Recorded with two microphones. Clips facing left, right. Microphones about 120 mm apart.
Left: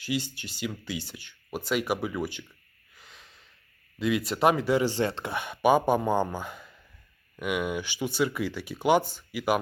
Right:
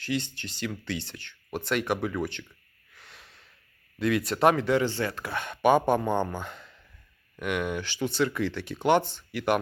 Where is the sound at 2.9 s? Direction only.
Centre (ahead or behind).